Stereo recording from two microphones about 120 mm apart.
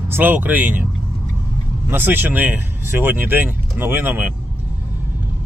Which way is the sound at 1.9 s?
15° right (ahead or behind).